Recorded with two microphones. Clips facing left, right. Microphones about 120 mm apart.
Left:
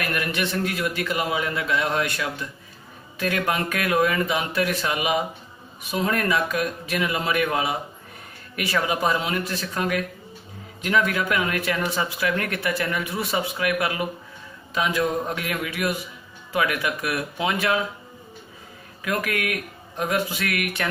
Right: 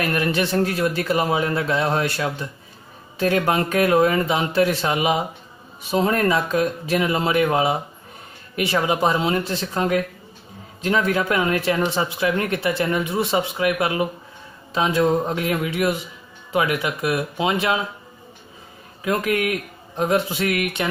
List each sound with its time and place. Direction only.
0.0 s a man's voice: 30° right (ahead or behind)
19.0 s speech: 25° right (ahead or behind)